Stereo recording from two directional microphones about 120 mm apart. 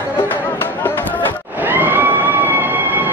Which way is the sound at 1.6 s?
15° right (ahead or behind).